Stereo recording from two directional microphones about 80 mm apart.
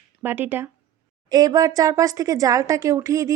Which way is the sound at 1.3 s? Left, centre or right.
Right.